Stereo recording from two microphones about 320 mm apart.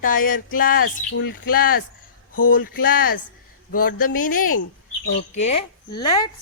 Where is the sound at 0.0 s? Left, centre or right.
Left.